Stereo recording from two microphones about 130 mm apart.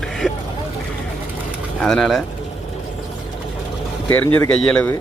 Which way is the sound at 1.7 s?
5° left (ahead or behind).